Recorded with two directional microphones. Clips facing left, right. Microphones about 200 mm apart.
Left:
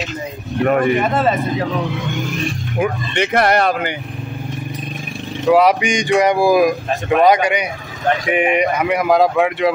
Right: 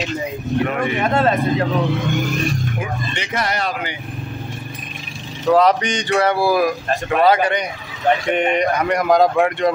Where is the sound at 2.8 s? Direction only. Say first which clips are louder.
Left 8 dB; 60° left (ahead or behind).